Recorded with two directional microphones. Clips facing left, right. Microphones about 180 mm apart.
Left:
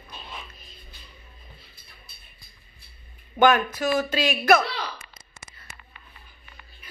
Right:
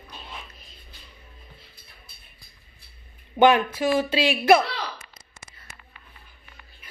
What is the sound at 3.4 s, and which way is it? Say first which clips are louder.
Speech: right 2 dB; 30° right (ahead or behind).